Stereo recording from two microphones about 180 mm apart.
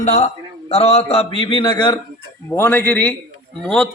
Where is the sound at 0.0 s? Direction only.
40° left (ahead or behind).